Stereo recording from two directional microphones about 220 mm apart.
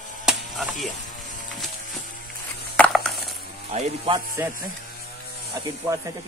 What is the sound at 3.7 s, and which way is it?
Speech, 30° right (ahead or behind).